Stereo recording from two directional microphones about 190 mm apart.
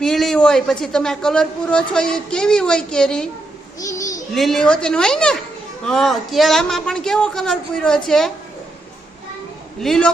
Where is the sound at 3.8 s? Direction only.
15° left (ahead or behind).